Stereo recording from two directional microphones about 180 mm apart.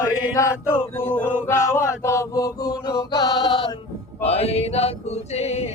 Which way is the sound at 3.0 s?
20° left (ahead or behind).